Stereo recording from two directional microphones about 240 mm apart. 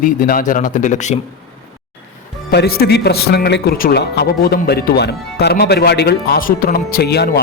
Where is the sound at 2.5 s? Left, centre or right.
Left.